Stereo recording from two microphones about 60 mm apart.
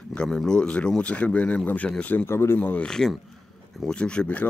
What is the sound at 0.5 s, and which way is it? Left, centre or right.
Speech, centre.